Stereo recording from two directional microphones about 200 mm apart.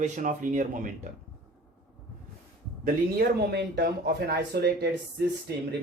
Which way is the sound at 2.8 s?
50° right (ahead or behind).